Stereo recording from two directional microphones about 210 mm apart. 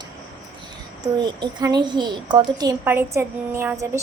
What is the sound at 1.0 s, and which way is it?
A child's voice, 20° right (ahead or behind).